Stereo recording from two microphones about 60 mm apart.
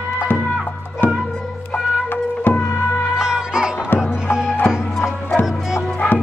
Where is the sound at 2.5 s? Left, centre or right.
Left.